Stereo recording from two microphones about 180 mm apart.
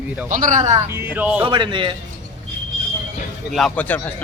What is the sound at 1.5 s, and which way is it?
Speech, 25° right (ahead or behind).